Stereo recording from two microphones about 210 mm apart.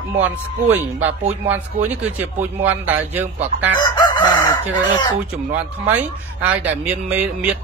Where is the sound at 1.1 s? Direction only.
30° right (ahead or behind).